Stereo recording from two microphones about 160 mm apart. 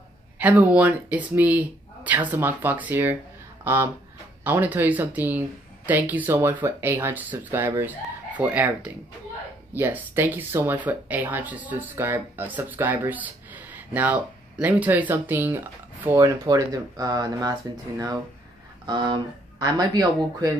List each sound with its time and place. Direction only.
0.4 s speech: 10° right (ahead or behind)